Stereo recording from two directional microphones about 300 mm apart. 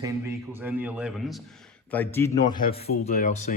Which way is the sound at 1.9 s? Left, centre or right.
Centre.